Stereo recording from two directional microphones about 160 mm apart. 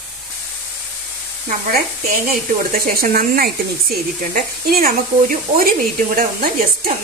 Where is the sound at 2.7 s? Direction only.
70° right (ahead or behind).